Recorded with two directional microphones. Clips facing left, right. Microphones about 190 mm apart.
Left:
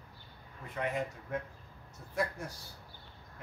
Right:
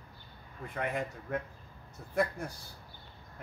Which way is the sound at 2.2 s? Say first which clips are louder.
Right 4 dB; 55° right (ahead or behind).